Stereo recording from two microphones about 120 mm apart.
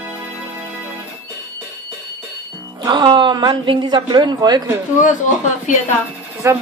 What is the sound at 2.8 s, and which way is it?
A woman's voice, 40° right (ahead or behind).